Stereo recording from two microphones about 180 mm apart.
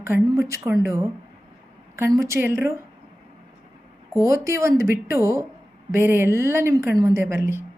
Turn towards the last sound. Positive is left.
turn(degrees=-15)  # may be behind; listen again after turning